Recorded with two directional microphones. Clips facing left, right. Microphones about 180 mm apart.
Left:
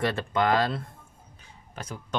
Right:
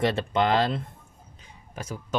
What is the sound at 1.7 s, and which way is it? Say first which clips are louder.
Speech: right 3 dB; 10° right (ahead or behind).